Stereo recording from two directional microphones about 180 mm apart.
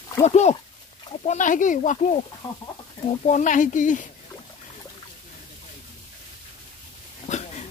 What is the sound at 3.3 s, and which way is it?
Speech, 45° left (ahead or behind).